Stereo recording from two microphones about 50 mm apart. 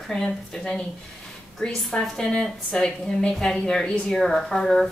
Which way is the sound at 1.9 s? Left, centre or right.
Centre.